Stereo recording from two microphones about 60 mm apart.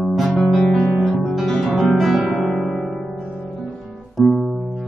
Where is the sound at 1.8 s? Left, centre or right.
Centre.